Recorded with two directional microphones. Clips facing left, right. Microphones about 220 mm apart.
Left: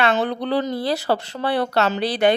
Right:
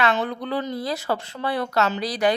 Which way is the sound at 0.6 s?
30° left (ahead or behind).